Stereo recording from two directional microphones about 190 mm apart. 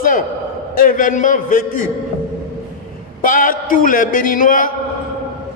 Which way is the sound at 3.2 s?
45° left (ahead or behind).